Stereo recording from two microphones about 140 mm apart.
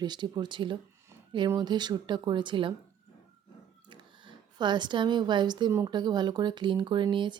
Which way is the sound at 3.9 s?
35° right (ahead or behind).